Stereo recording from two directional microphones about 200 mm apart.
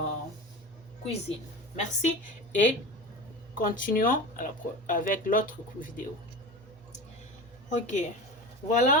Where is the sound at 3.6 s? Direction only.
45° left (ahead or behind).